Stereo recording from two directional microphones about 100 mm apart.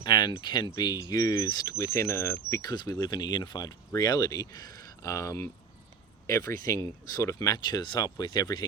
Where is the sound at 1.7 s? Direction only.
30° left (ahead or behind).